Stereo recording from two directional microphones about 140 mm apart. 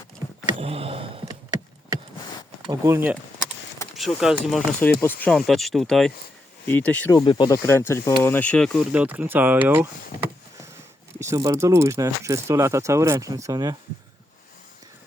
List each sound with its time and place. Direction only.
0.6 s a sound: 45° right (ahead or behind)
2.6 s speech: 20° right (ahead or behind)
3.9 s speech: centre (ahead or behind)
4.8 s speech: 15° left (ahead or behind)
5.5 s speech: centre (ahead or behind)
6.7 s speech: 10° left (ahead or behind)
7.1 s speech: 35° left (ahead or behind)
7.6 s speech: 20° left (ahead or behind)
8.9 s speech: 10° right (ahead or behind)
11.2 s speech: 20° right (ahead or behind)